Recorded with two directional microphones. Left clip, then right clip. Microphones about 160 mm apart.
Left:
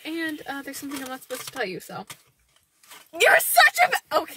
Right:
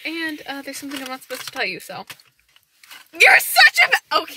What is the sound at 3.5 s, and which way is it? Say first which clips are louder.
Speech: right 4 dB; 15° left (ahead or behind).